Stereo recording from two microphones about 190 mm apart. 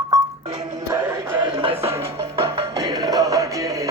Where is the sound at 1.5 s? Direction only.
30° right (ahead or behind).